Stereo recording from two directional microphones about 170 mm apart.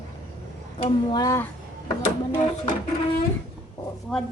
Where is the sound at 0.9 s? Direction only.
25° left (ahead or behind).